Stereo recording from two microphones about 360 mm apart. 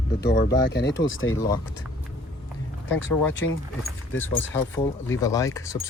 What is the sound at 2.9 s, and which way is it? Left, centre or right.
Speech, left.